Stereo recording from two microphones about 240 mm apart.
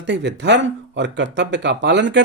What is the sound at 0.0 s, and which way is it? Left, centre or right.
Speech, right.